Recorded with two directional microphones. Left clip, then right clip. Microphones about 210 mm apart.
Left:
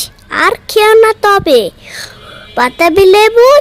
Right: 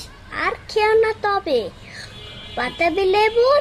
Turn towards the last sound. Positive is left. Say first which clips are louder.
# left 11 dB
turn(degrees=45)  # may be behind; listen again after turning